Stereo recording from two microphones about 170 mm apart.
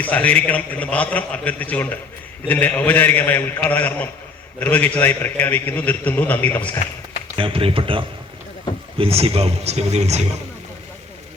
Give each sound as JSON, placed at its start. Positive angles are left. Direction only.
{"t": 0.0, "sound": "a man's voice", "side_deg": 10}
{"t": 7.3, "sound": "speech", "side_deg": -30}